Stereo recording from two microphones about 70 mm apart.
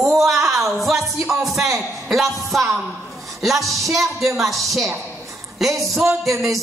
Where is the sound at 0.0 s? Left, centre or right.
Centre.